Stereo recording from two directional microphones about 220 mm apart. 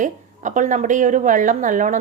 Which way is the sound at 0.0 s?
35° right (ahead or behind).